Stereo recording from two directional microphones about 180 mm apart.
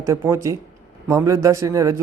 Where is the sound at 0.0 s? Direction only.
15° right (ahead or behind).